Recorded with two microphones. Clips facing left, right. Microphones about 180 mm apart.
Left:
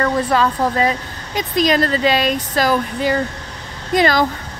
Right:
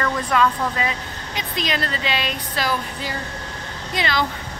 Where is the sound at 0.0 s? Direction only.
35° left (ahead or behind).